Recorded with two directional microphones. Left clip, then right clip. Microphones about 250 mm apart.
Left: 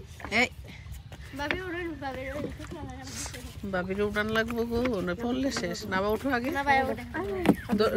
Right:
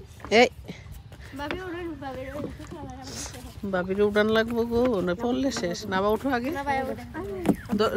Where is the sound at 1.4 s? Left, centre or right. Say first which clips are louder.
Left 1 dB; centre.